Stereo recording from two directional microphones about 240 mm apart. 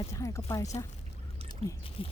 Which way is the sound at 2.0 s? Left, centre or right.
Left.